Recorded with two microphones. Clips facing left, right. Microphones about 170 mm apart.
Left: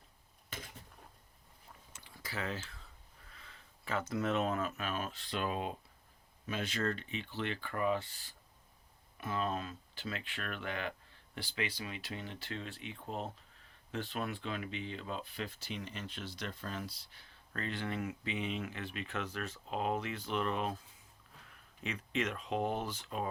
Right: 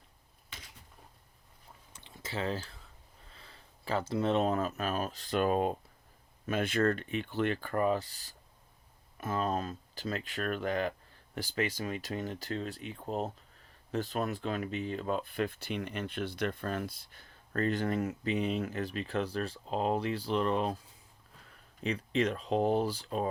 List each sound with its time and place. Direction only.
2.0 s a sound: 25° right (ahead or behind)
3.3 s speech: 35° right (ahead or behind)
21.8 s speech: 35° right (ahead or behind)